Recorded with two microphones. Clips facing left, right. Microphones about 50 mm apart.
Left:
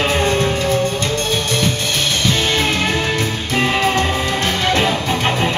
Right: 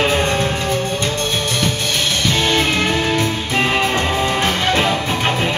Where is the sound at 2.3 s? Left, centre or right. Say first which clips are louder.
Right 2 dB; centre.